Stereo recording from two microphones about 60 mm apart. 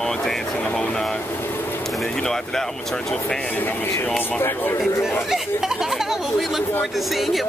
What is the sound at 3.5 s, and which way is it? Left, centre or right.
Speech, left.